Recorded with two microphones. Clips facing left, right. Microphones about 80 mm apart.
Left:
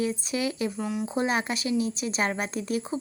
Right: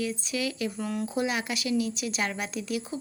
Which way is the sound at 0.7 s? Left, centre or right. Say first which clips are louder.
Left 1 dB; centre.